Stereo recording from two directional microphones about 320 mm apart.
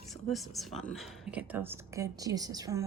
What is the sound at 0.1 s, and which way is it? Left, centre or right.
Speech, centre.